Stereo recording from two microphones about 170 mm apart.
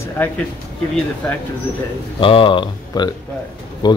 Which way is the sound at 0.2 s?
10° left (ahead or behind).